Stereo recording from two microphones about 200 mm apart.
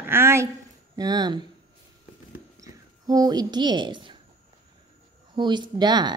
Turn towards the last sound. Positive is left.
turn(degrees=-20)  # may be behind; listen again after turning